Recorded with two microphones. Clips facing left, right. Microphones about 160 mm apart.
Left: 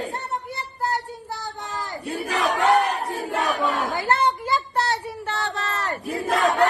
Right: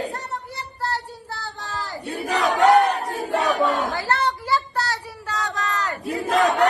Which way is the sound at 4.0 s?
20° left (ahead or behind).